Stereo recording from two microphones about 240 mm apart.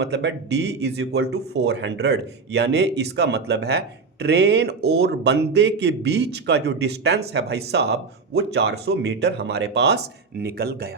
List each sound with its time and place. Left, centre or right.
0.0 s speech: right